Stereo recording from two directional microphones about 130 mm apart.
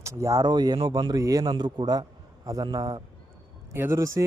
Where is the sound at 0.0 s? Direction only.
25° right (ahead or behind).